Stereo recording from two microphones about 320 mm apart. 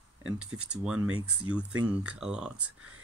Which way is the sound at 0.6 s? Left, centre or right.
Centre.